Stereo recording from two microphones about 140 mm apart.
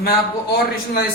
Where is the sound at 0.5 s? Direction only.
90° left.